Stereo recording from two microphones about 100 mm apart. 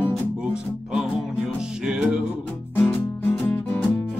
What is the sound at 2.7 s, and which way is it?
Music, 20° left (ahead or behind).